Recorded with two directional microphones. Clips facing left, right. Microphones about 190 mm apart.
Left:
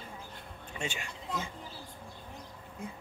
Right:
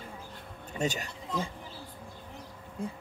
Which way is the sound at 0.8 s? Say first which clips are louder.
Right 7 dB; 40° right (ahead or behind).